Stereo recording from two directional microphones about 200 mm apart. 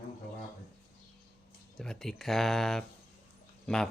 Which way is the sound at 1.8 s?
Centre (ahead or behind).